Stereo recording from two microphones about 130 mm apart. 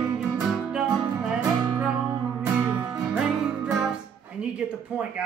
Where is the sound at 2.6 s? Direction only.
20° right (ahead or behind).